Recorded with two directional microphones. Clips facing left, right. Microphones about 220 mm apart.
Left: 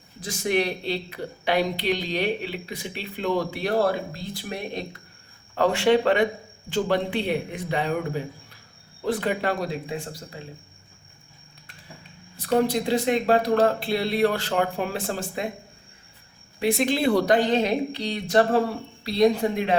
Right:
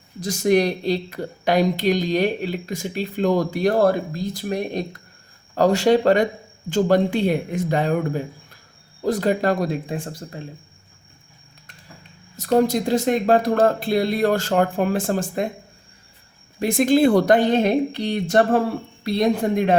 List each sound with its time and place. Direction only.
0.2 s speech: 40° right (ahead or behind)
12.4 s speech: 45° right (ahead or behind)
16.6 s speech: 45° right (ahead or behind)